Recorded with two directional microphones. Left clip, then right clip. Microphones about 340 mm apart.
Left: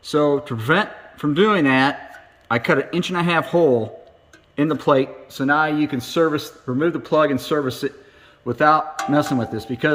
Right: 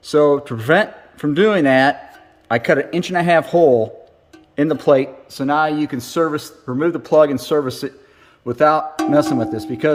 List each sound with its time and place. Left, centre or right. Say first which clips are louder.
0.0 s a man's voice: right 4 dB; centre
5.7 s speech: even; centre
6.1 s a man's voice: even; centre